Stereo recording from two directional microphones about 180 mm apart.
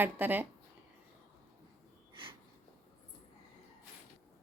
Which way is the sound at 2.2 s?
30° right (ahead or behind).